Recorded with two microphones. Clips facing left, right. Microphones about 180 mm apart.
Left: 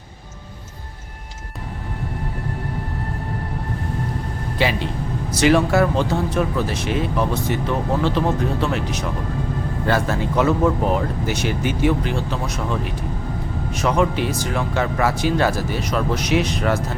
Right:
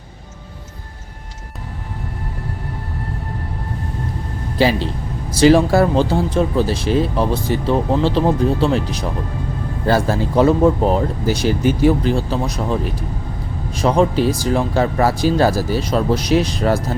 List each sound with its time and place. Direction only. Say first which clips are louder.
4.5 s speech: right 5 dB; 35° right (ahead or behind)